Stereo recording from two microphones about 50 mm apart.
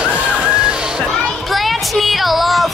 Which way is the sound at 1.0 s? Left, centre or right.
Centre.